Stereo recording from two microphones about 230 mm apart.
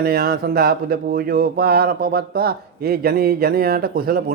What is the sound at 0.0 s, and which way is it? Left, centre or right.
Speech, right.